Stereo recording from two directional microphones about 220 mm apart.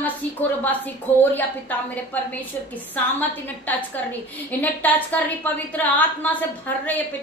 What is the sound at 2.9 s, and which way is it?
A woman's voice, 10° left (ahead or behind).